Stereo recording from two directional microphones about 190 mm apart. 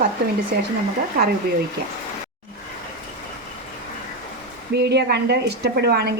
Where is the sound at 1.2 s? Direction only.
50° right (ahead or behind).